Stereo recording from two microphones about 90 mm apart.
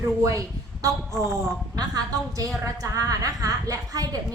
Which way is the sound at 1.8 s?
45° right (ahead or behind).